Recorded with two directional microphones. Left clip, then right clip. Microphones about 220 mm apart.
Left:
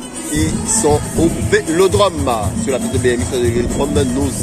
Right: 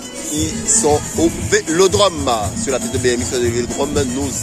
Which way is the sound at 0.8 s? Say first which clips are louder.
Left 1 dB; 25° right (ahead or behind).